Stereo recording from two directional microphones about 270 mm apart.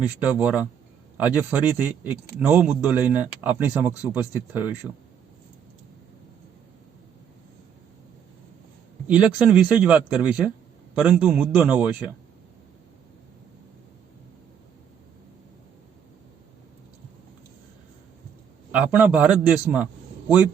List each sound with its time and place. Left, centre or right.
0.2 s a man's voice: centre
9.0 s a man's voice: centre
18.7 s a man's voice: centre